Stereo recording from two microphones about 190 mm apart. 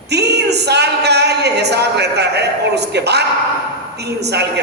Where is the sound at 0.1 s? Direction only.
60° right (ahead or behind).